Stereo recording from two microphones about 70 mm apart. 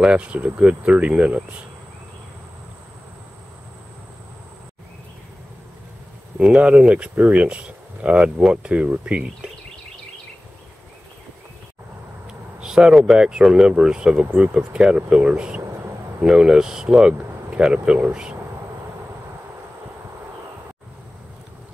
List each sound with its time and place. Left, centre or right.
0.0 s speech: centre
6.3 s speech: centre
12.3 s speech: centre